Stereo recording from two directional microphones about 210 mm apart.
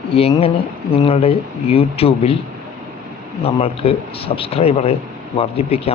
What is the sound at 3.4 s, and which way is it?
A man's voice, 30° left (ahead or behind).